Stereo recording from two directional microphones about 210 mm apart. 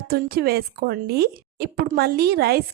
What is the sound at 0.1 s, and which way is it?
Speech, 45° right (ahead or behind).